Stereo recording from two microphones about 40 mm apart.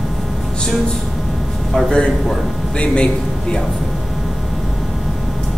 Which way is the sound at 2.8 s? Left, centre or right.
Left.